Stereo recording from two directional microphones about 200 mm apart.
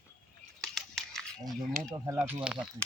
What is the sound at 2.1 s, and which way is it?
Speech, 10° right (ahead or behind).